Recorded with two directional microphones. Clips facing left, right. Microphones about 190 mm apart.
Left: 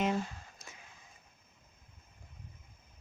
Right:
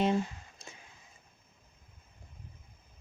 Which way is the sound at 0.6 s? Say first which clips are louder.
Right 3 dB; 30° right (ahead or behind).